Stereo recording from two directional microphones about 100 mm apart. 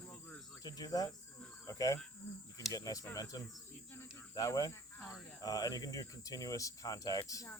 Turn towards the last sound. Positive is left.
turn(degrees=35)  # may be behind; listen again after turning